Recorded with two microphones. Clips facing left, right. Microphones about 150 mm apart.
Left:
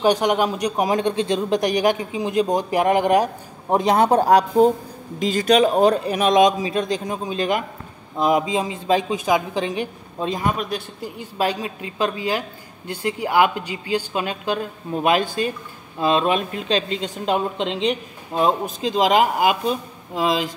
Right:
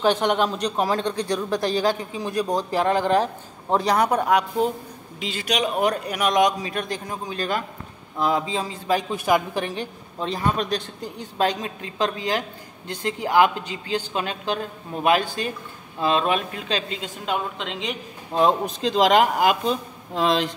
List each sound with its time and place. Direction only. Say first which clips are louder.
0.0 s a man's voice: left 2 dB; 10° left (ahead or behind); by 17.9 s 30° left (ahead or behind)
18.3 s speech: even; 5° left (ahead or behind)